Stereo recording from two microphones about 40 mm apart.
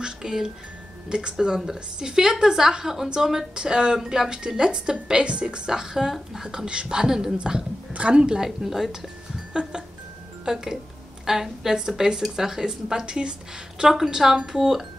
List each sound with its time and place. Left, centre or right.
0.0 s music: centre
1.0 s a woman's voice: right
5.7 s speech: centre
6.4 s a woman's voice: centre
7.0 s speech: centre
7.9 s a sound: right
8.2 s a woman's voice: right
8.5 s speech: centre
9.5 s a woman's voice: right
10.4 s speech: centre
13.8 s speech: centre